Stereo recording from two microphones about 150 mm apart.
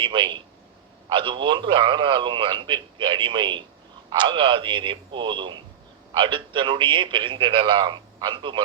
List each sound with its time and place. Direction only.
0.0 s a man's voice: 35° right (ahead or behind)